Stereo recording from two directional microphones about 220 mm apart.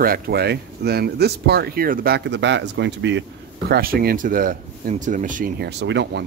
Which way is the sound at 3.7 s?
40° right (ahead or behind).